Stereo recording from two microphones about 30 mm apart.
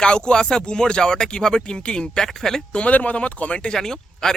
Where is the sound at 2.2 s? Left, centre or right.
Centre.